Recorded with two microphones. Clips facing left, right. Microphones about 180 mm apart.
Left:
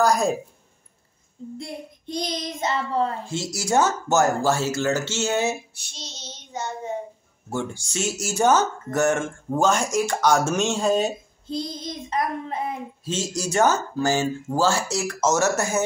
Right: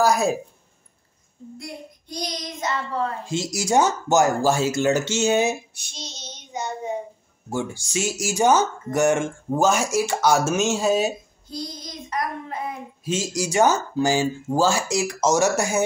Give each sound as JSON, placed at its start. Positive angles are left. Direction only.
{"t": 0.0, "sound": "a woman's voice", "side_deg": -5}
{"t": 1.6, "sound": "child singing", "side_deg": 25}
{"t": 3.3, "sound": "speech", "side_deg": -15}
{"t": 11.4, "sound": "child singing", "side_deg": 25}
{"t": 13.0, "sound": "speech", "side_deg": -10}